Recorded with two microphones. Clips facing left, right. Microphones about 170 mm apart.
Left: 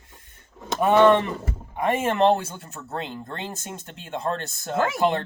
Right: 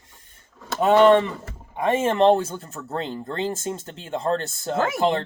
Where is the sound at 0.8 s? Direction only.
20° right (ahead or behind).